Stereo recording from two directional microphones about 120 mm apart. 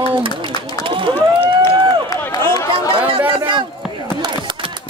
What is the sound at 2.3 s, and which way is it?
Chatter, 30° left (ahead or behind).